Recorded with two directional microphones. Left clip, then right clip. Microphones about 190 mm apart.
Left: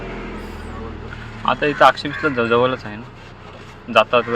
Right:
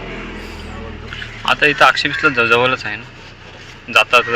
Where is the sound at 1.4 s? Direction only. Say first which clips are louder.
Right 2 dB; 20° left (ahead or behind).